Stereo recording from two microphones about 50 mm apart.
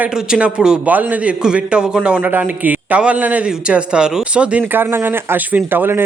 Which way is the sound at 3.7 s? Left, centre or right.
Right.